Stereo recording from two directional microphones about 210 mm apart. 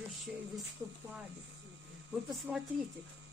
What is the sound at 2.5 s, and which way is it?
Speech, 5° right (ahead or behind).